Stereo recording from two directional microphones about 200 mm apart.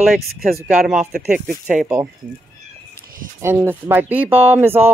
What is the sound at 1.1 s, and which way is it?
Speech, 50° right (ahead or behind).